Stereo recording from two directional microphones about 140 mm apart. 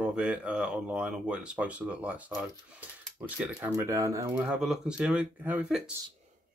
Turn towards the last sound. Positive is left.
turn(degrees=-10)  # may be behind; listen again after turning